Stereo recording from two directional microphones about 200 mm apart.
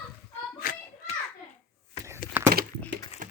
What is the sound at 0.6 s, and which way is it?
Hands, 45° left (ahead or behind).